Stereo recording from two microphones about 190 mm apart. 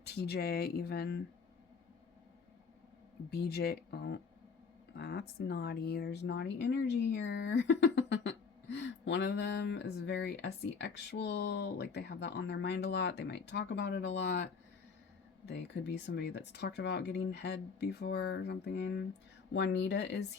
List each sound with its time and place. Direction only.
0.0 s speech: 60° left (ahead or behind)
3.2 s speech: 60° left (ahead or behind)